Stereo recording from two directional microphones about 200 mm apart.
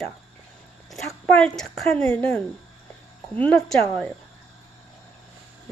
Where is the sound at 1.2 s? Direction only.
5° left (ahead or behind).